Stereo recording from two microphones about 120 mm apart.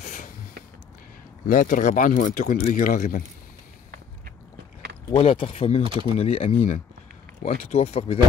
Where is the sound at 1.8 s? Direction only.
90° left.